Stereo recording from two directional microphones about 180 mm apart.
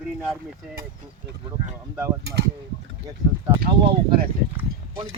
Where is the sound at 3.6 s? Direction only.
60° right (ahead or behind).